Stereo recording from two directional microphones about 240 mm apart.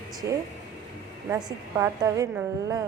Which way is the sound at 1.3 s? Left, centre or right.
Centre.